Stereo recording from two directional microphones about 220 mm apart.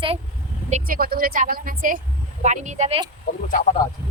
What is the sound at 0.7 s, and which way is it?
A woman's voice, 40° right (ahead or behind).